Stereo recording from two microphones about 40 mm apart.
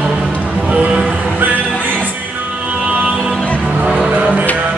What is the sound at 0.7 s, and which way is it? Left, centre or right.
Music, right.